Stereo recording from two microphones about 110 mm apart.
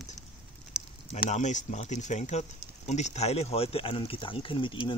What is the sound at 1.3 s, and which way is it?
Speech, 90° left.